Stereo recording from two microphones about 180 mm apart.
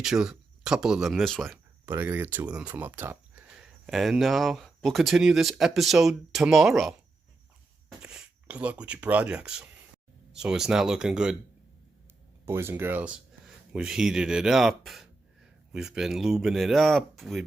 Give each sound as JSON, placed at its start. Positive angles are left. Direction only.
{"t": 0.0, "sound": "speech", "side_deg": -5}
{"t": 1.9, "sound": "speech", "side_deg": -10}
{"t": 8.0, "sound": "speech", "side_deg": -5}
{"t": 12.5, "sound": "speech", "side_deg": -15}